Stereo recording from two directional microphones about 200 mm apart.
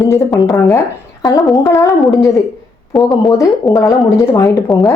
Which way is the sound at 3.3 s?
15° left (ahead or behind).